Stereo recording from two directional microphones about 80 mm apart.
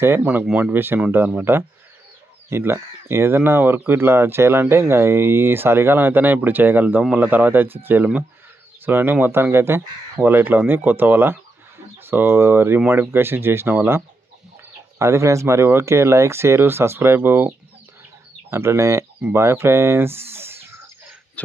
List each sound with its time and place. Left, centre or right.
0.0 s speech: right
0.4 s speech: centre
0.7 s speech: right
18.5 s speech: right
21.4 s a sound: centre